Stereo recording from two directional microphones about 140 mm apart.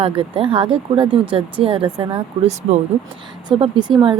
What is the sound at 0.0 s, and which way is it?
Speech, 40° right (ahead or behind).